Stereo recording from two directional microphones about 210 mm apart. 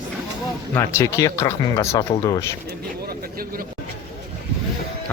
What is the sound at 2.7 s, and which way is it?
Vehicle, 45° right (ahead or behind).